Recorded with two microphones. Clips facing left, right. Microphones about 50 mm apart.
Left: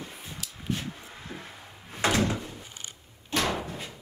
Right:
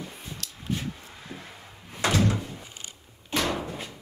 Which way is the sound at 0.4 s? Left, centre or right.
Centre.